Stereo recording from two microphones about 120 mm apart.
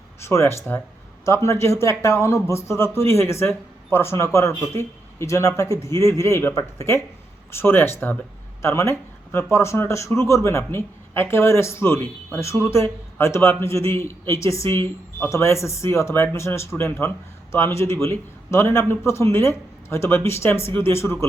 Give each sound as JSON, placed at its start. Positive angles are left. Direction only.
{"t": 0.2, "sound": "a man's voice", "side_deg": 20}